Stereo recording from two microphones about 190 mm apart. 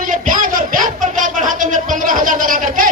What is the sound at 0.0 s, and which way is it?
A man's voice, 45° right (ahead or behind).